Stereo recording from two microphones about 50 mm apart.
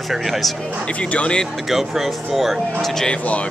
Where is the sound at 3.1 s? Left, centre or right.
Left.